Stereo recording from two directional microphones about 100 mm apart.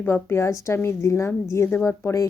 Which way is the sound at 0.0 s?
25° left (ahead or behind).